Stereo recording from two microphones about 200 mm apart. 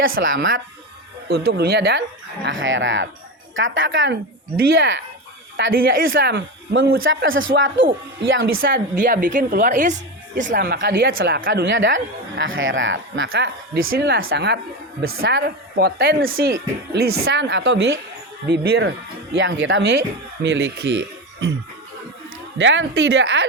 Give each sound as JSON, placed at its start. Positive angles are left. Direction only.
{"t": 0.2, "sound": "speech", "side_deg": -70}
{"t": 1.3, "sound": "speech", "side_deg": -55}
{"t": 7.0, "sound": "speech", "side_deg": -75}
{"t": 8.6, "sound": "a woman's voice", "side_deg": -45}
{"t": 11.5, "sound": "speech", "side_deg": -65}
{"t": 13.9, "sound": "speech", "side_deg": -55}
{"t": 14.2, "sound": "speech", "side_deg": -70}
{"t": 22.5, "sound": "speech", "side_deg": -65}